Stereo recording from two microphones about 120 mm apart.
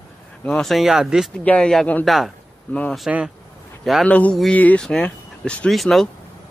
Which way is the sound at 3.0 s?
5° right (ahead or behind).